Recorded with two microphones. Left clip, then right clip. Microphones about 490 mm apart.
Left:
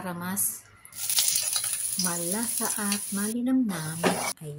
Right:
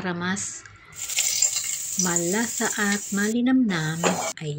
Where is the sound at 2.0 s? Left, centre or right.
Left.